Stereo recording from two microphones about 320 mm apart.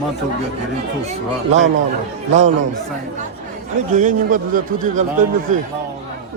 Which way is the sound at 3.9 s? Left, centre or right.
Right.